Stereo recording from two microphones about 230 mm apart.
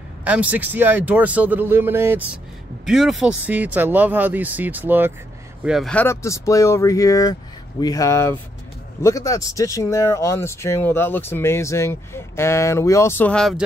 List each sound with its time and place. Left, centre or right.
0.2 s speech: centre